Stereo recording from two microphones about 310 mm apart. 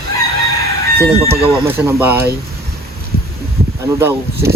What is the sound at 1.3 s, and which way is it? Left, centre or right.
Speech, centre.